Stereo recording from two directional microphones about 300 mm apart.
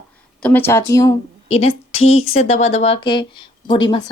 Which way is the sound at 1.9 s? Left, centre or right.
Left.